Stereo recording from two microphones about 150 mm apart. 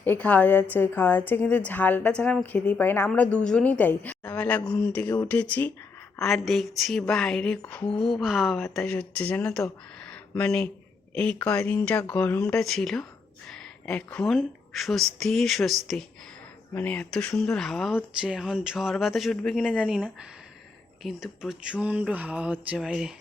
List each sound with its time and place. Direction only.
0.0 s a woman's voice: 10° left (ahead or behind)
10.0 s a sound: 10° left (ahead or behind)
11.1 s a woman's voice: 5° left (ahead or behind)